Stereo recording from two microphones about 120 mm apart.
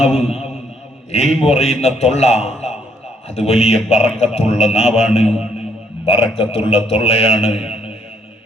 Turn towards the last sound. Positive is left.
turn(degrees=55)  # may be behind; listen again after turning